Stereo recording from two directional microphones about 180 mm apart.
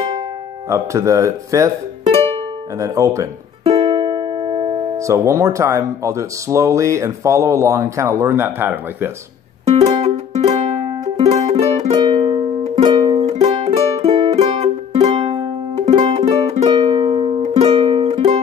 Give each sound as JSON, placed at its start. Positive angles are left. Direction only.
{"t": 0.7, "sound": "speech", "side_deg": -15}
{"t": 2.0, "sound": "music", "side_deg": -35}
{"t": 2.8, "sound": "speech", "side_deg": -15}
{"t": 3.6, "sound": "speech", "side_deg": -30}
{"t": 9.7, "sound": "music", "side_deg": -40}
{"t": 11.9, "sound": "music", "side_deg": -25}